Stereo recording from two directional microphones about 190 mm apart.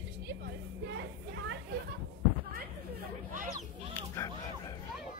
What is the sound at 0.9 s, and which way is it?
Music, 65° right (ahead or behind).